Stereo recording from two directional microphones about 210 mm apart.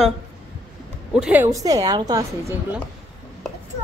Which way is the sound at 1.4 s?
15° right (ahead or behind).